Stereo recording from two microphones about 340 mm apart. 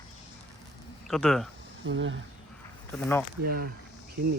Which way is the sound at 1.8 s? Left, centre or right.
Right.